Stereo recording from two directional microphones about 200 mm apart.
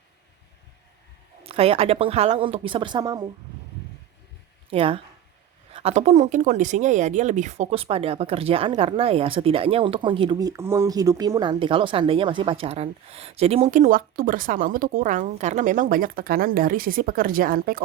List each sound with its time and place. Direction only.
1.5 s speech: 30° right (ahead or behind)
4.7 s a woman's voice: 30° right (ahead or behind); by 17.8 s 45° right (ahead or behind)